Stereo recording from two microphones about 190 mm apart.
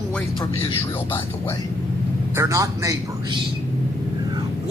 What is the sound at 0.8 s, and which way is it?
Speech, 10° left (ahead or behind).